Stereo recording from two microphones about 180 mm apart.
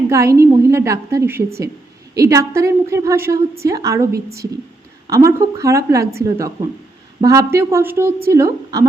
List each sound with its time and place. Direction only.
0.1 s a woman's voice: 15° right (ahead or behind)